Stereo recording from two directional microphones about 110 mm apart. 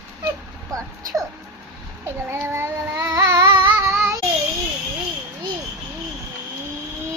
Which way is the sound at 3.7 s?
25° right (ahead or behind).